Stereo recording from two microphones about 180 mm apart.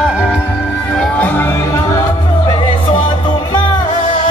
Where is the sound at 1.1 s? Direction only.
10° left (ahead or behind).